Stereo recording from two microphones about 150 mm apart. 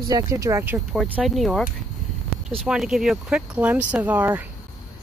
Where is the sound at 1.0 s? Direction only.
10° right (ahead or behind).